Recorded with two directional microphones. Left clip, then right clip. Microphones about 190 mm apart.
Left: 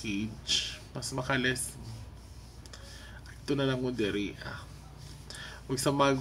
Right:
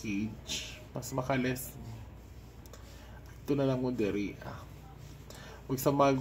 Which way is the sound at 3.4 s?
20° left (ahead or behind).